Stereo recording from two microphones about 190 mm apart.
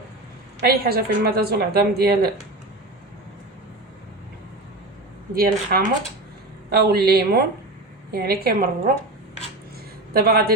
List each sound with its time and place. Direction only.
0.6 s a woman's voice: 55° right (ahead or behind)
5.3 s a woman's voice: 55° right (ahead or behind)
10.1 s a man's voice: 55° right (ahead or behind)